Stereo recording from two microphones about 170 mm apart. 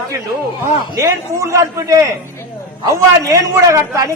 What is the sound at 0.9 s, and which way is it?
A man's voice, 15° right (ahead or behind).